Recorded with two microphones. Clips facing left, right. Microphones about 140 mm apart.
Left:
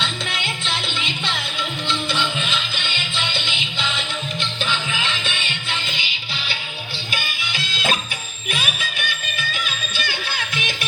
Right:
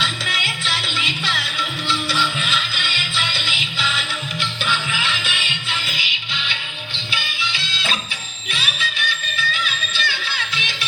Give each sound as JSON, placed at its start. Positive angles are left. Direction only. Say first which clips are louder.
{"t": 2.4, "sound": "music", "louder": "right 1 dB", "side_deg": 25}
{"t": 7.1, "sound": "music", "louder": "right 2 dB", "side_deg": 45}